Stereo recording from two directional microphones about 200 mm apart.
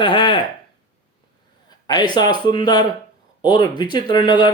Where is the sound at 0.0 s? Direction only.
25° left (ahead or behind).